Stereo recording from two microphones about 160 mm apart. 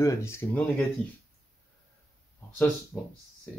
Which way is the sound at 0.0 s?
15° left (ahead or behind).